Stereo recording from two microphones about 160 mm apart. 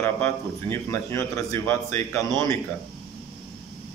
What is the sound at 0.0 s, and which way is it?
A man's voice, 15° left (ahead or behind).